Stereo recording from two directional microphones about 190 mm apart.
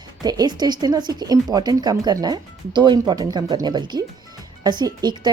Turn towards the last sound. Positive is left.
turn(degrees=-20)  # may be behind; listen again after turning